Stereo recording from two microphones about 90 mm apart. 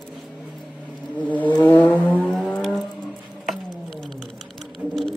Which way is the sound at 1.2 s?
20° left (ahead or behind).